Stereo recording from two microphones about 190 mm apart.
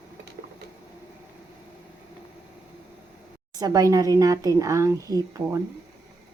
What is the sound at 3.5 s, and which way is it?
Speech, 20° right (ahead or behind).